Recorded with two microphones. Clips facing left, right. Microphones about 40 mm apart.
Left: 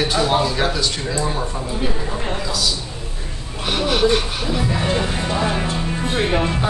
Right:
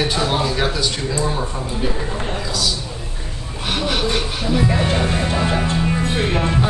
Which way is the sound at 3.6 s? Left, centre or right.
Centre.